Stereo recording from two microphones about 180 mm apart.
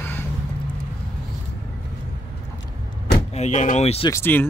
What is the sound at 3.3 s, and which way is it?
Speech, 40° left (ahead or behind).